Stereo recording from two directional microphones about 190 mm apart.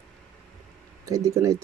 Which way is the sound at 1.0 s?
15° right (ahead or behind).